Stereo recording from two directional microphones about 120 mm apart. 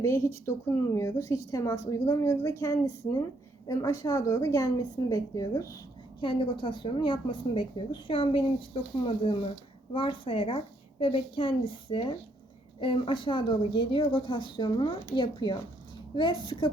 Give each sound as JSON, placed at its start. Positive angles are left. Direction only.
{"t": 0.0, "sound": "a woman's voice", "side_deg": 25}
{"t": 6.1, "sound": "speech", "side_deg": 45}